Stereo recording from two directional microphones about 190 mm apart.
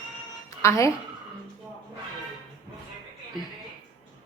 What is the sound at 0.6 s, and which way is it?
Speech, 15° left (ahead or behind).